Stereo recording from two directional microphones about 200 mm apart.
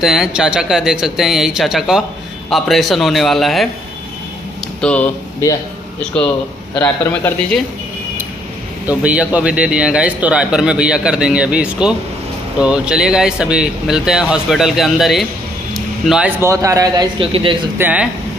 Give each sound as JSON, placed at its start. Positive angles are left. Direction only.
{"t": 0.0, "sound": "a man's voice", "side_deg": 0}
{"t": 4.8, "sound": "a man's voice", "side_deg": 5}
{"t": 6.7, "sound": "a man's voice", "side_deg": 5}
{"t": 8.8, "sound": "a man's voice", "side_deg": -5}
{"t": 17.7, "sound": "speech", "side_deg": -10}